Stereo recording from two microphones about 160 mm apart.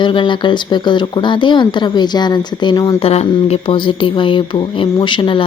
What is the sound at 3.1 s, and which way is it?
Music, 40° left (ahead or behind).